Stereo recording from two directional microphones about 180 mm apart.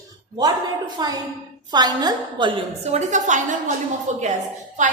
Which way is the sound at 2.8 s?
40° right (ahead or behind).